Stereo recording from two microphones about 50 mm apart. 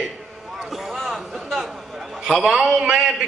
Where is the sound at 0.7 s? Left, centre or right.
Centre.